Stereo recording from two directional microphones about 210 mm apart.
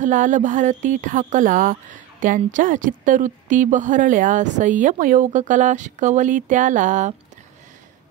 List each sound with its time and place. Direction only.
0.0 s speech: 40° right (ahead or behind)